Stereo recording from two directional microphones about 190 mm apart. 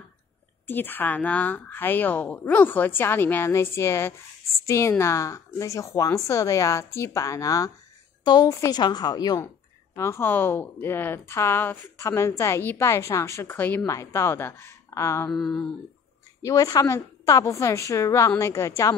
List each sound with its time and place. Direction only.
0.7 s a woman's voice: 10° left (ahead or behind)
15.3 s a sound: centre (ahead or behind)
16.4 s speech: 20° left (ahead or behind)